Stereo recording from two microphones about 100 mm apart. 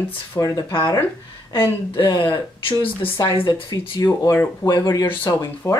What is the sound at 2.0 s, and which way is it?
Speech, 50° left (ahead or behind).